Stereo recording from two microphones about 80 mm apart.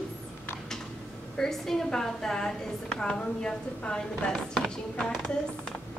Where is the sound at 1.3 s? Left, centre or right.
Centre.